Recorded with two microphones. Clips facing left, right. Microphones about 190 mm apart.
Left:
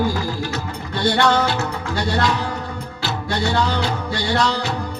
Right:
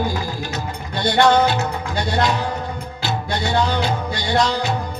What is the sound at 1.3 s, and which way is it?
Music, 20° right (ahead or behind).